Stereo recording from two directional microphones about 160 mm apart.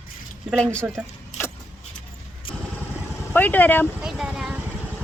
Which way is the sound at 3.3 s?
10° left (ahead or behind).